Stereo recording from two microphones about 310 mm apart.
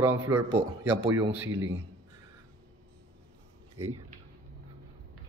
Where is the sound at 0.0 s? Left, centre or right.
Centre.